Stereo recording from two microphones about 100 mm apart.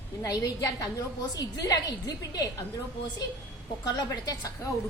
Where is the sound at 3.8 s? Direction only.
40° left (ahead or behind).